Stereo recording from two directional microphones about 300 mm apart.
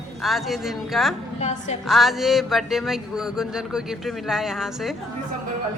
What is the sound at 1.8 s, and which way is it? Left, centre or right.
Speech, centre.